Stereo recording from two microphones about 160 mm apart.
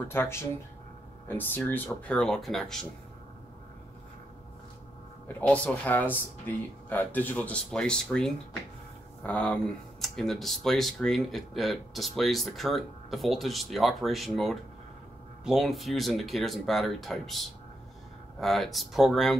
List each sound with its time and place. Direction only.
0.1 s speech: 15° left (ahead or behind)
5.5 s speech: 10° left (ahead or behind)